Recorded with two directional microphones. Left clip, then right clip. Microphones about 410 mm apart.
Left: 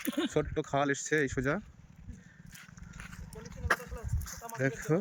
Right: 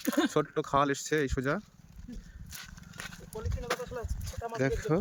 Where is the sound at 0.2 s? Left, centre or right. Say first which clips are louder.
Right 3 dB; centre.